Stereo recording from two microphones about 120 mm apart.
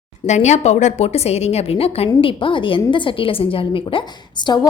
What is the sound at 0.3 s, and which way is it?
A woman's voice, 75° left (ahead or behind).